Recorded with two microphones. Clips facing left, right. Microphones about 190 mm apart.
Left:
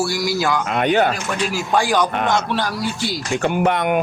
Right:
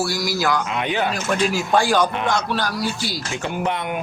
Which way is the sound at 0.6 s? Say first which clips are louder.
Left 6 dB; 55° left (ahead or behind).